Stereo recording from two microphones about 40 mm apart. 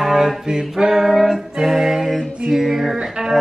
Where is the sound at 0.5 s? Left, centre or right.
Centre.